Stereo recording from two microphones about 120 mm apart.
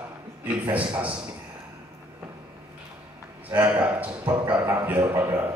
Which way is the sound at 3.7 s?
15° right (ahead or behind).